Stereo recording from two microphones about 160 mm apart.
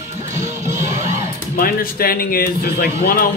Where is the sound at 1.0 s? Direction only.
20° right (ahead or behind).